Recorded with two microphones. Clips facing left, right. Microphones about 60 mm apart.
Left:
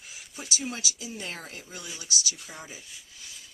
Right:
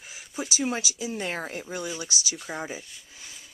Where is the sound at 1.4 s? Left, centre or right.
Right.